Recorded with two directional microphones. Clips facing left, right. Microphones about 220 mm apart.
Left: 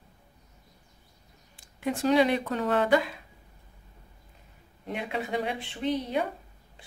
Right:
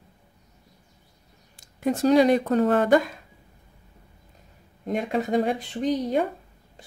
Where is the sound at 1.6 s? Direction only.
40° right (ahead or behind).